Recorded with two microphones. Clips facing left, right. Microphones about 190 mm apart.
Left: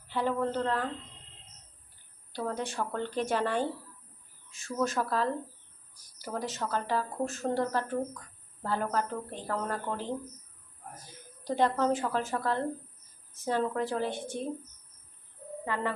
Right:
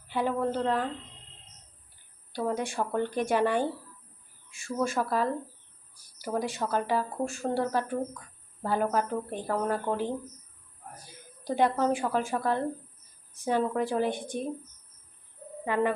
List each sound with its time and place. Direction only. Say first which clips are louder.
0.1 s speech: right 2 dB; 15° right (ahead or behind)
2.3 s speech: right 4 dB; 15° right (ahead or behind)
11.4 s speech: right 1 dB; 15° right (ahead or behind)
15.6 s speech: right 6 dB; 15° right (ahead or behind)